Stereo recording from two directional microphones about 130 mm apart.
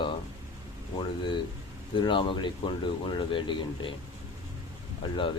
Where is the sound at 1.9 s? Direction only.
40° left (ahead or behind).